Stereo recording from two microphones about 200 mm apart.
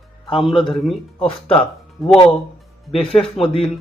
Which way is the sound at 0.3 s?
Centre (ahead or behind).